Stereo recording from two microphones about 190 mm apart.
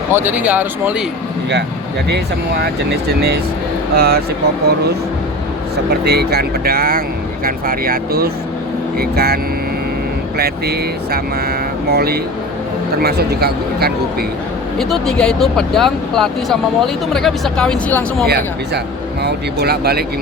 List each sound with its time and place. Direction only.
0.1 s speech: 10° right (ahead or behind)
3.2 s speech: 55° right (ahead or behind)
5.7 s speech: 60° right (ahead or behind)
14.8 s speech: centre (ahead or behind)
19.2 s speech: 55° right (ahead or behind)